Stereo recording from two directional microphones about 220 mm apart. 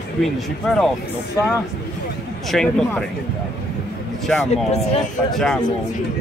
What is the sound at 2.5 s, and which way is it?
Speech, 5° left (ahead or behind).